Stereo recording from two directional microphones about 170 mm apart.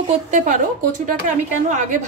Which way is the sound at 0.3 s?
50° right (ahead or behind).